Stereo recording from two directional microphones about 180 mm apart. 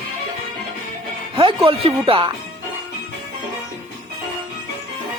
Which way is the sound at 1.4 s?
30° right (ahead or behind).